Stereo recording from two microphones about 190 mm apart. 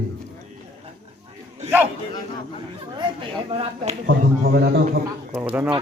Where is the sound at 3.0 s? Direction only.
30° right (ahead or behind).